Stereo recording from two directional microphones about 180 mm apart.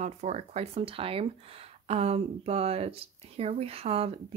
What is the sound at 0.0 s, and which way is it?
Speech, 40° right (ahead or behind).